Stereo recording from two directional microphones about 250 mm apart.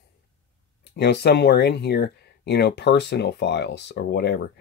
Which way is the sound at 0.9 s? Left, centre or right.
Left.